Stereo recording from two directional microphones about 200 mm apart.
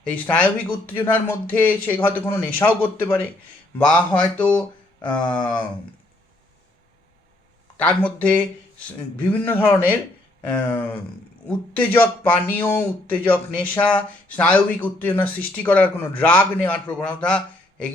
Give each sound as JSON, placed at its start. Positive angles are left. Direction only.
{"t": 0.0, "sound": "speech", "side_deg": 5}
{"t": 7.8, "sound": "speech", "side_deg": 5}